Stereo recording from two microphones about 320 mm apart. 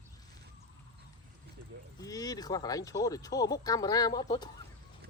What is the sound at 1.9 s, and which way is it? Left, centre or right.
Speech, centre.